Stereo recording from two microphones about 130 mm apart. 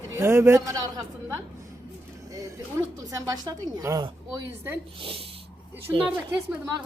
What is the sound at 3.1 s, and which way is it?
Speech, 30° right (ahead or behind).